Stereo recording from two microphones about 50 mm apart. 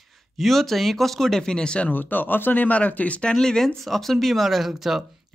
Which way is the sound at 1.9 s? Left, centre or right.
Left.